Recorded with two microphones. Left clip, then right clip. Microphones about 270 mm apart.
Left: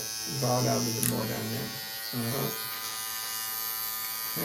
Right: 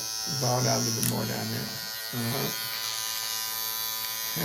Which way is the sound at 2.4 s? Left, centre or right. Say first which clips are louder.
Right 3 dB; right.